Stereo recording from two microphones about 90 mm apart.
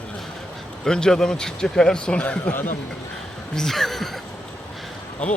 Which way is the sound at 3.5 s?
5° left (ahead or behind).